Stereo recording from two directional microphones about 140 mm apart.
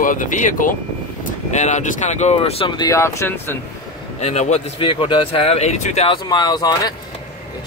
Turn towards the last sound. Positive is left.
turn(degrees=30)  # may be behind; listen again after turning